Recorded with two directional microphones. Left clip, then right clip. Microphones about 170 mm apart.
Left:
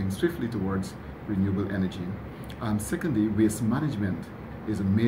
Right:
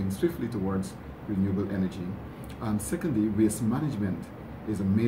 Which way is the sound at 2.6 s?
Centre (ahead or behind).